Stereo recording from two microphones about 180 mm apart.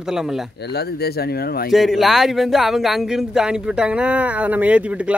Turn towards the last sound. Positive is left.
turn(degrees=-5)  # may be behind; listen again after turning